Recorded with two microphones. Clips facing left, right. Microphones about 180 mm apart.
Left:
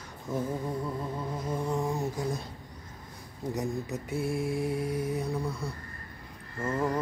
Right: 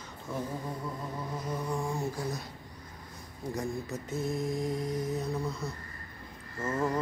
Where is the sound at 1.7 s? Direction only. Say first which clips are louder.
Left 3 dB; 20° left (ahead or behind).